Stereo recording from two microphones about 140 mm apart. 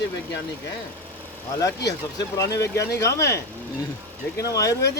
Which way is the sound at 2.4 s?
20° left (ahead or behind).